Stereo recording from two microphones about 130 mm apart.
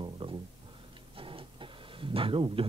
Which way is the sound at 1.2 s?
40° right (ahead or behind).